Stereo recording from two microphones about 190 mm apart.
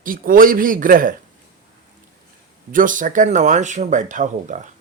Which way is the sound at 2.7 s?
45° right (ahead or behind).